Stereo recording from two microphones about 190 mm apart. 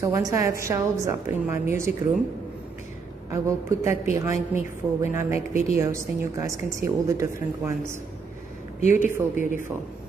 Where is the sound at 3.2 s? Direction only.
15° right (ahead or behind).